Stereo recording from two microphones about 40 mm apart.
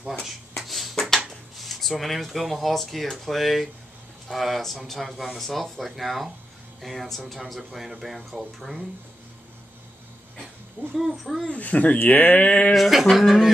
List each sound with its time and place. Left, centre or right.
0.7 s a sound: centre
1.3 s speech: centre
11.0 s speech: centre
11.5 s speech: left
12.0 s speech: left
12.7 s speech: centre